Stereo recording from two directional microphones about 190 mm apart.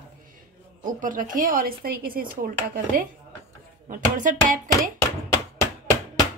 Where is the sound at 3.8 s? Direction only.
45° right (ahead or behind).